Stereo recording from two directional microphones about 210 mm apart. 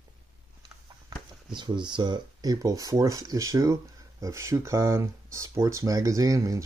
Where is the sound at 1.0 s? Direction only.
20° right (ahead or behind).